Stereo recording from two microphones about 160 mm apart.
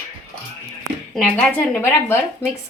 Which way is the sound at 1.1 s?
5° left (ahead or behind).